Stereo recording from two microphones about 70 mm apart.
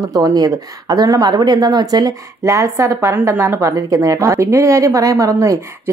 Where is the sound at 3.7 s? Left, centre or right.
Right.